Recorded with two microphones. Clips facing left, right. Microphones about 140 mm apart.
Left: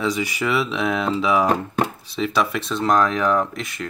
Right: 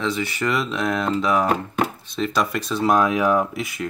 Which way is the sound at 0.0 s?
10° left (ahead or behind).